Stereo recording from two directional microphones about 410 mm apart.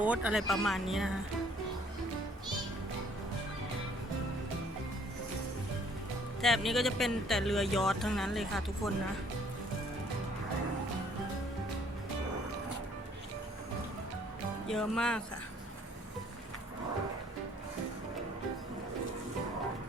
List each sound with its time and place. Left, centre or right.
0.0 s speech: centre
6.4 s speech: centre
14.7 s speech: centre